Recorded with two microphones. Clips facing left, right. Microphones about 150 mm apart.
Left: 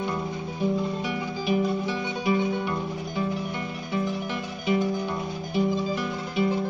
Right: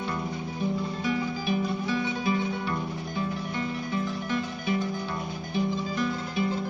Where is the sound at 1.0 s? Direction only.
15° left (ahead or behind).